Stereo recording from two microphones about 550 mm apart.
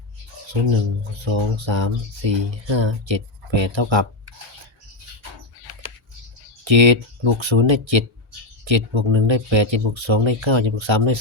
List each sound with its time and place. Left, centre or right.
1.1 s speech: right
6.7 s speech: right